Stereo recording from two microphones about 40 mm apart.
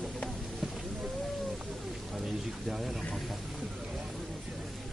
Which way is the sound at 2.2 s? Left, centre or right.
Centre.